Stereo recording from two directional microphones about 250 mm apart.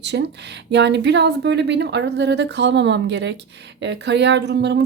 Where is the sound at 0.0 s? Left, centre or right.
Right.